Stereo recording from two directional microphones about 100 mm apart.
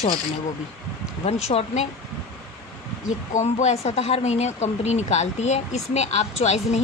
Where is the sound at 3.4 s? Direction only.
90° left.